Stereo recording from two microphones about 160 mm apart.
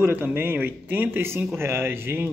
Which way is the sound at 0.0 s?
10° right (ahead or behind).